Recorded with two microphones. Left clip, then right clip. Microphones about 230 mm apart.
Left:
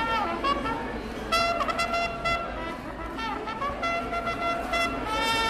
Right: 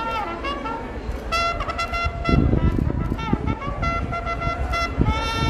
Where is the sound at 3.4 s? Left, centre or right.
Centre.